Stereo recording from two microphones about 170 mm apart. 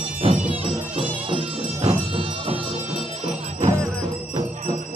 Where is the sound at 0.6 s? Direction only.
30° right (ahead or behind).